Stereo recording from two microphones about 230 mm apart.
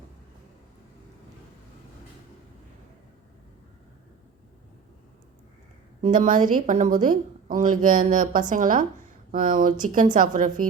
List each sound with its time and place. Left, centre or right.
6.0 s a woman's voice: right